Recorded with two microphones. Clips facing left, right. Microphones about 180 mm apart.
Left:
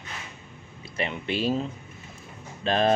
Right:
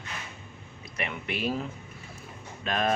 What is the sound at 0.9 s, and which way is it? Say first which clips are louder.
Speech: left 5 dB; 30° left (ahead or behind).